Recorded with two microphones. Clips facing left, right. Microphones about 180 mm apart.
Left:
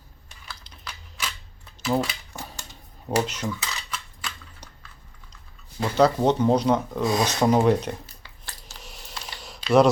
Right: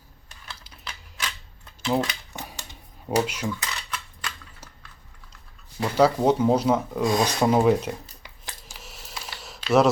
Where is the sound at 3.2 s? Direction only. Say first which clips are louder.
Right 1 dB; 5° right (ahead or behind).